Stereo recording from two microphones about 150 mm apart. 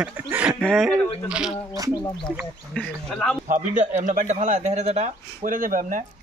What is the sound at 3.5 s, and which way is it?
A man's voice, 55° right (ahead or behind).